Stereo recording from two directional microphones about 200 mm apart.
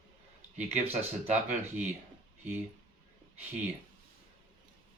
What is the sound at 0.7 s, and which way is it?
Speech, 35° right (ahead or behind).